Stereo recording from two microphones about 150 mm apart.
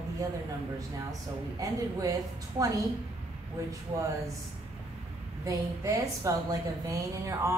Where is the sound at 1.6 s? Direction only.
20° right (ahead or behind).